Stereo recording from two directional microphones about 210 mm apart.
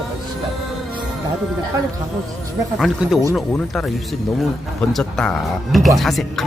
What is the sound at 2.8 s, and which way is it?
Speech, centre (ahead or behind).